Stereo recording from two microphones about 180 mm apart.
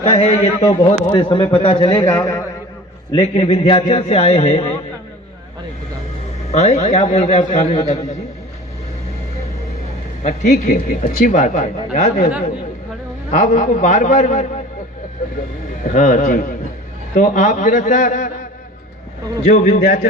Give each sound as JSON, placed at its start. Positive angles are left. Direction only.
{"t": 0.0, "sound": "a man's voice", "side_deg": 30}
{"t": 6.5, "sound": "a man's voice", "side_deg": 40}
{"t": 10.2, "sound": "speech", "side_deg": 40}
{"t": 13.3, "sound": "speech", "side_deg": 45}
{"t": 15.8, "sound": "speech", "side_deg": 45}
{"t": 19.5, "sound": "speech", "side_deg": 45}